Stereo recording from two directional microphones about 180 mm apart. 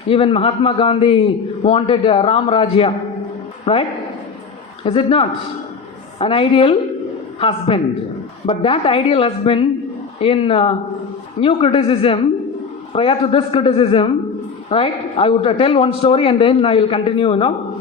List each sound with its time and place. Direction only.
0.1 s a man's voice: 30° left (ahead or behind)